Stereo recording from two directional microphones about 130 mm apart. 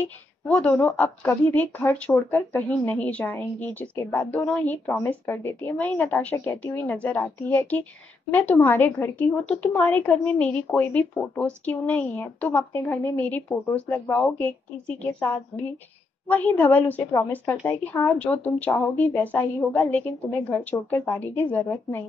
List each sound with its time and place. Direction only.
0.0 s a woman's voice: 10° left (ahead or behind)